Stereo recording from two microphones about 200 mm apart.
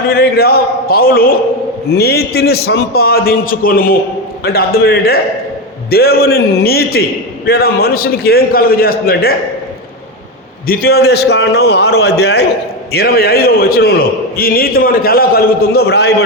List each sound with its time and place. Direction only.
0.1 s a man's voice: 50° left (ahead or behind)
10.7 s a man's voice: 50° left (ahead or behind)